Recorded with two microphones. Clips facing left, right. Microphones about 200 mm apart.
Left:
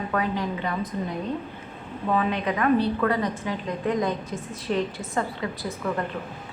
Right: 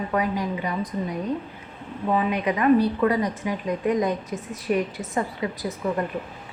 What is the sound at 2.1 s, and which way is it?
A woman's voice, 15° right (ahead or behind).